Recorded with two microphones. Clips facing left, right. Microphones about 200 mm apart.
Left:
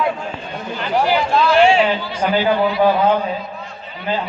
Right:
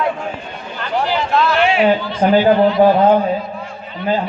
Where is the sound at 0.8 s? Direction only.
10° left (ahead or behind).